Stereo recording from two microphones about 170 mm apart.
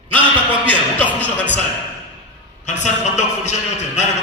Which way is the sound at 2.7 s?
45° left (ahead or behind).